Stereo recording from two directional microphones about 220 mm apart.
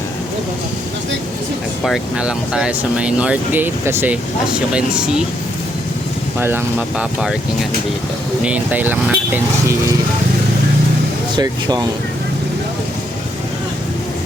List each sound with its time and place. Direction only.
1.8 s speech: centre (ahead or behind)
6.4 s speech: 10° right (ahead or behind)
11.3 s speech: 20° right (ahead or behind)